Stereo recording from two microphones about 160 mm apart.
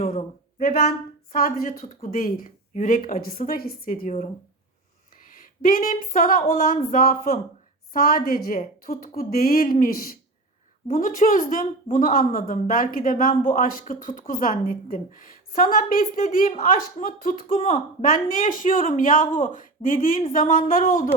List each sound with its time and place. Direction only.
0.0 s a sound: 45° left (ahead or behind)
1.3 s a woman's voice: 65° left (ahead or behind)
2.0 s a woman's voice: 60° left (ahead or behind)